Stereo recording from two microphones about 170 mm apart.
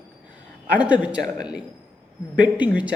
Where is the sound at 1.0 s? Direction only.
5° right (ahead or behind).